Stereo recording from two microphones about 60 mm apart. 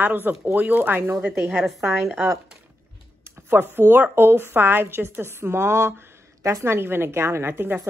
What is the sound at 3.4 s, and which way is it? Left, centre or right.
A woman's voice, right.